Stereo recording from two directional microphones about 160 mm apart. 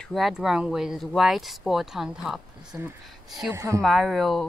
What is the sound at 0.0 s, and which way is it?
Speech, centre (ahead or behind).